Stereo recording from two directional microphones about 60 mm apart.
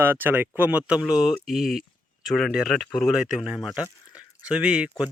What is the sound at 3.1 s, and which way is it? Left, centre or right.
Speech, centre.